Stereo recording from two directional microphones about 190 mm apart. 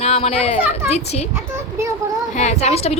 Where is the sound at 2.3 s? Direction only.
35° left (ahead or behind).